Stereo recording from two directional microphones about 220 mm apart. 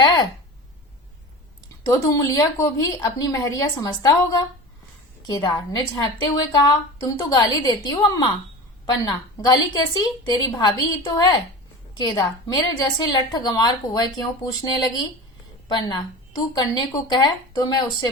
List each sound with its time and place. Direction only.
1.9 s a woman's voice: 15° left (ahead or behind)